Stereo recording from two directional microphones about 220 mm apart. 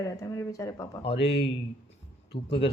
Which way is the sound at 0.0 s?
15° left (ahead or behind).